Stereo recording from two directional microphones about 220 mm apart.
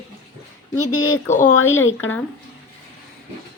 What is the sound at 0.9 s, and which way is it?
Speech, 20° left (ahead or behind).